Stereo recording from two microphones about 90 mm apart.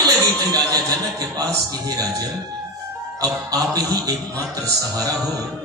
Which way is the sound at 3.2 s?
45° right (ahead or behind).